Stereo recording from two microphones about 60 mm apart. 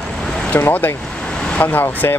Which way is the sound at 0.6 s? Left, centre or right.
Left.